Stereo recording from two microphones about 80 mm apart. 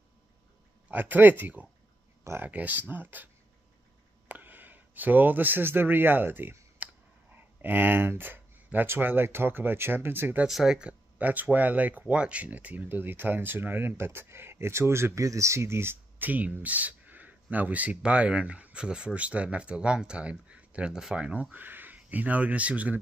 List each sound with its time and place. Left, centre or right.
0.8 s speech: right
4.3 s speech: right
10.4 s speech: centre